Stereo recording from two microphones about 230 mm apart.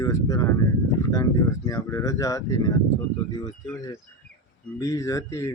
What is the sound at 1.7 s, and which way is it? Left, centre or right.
Speech, centre.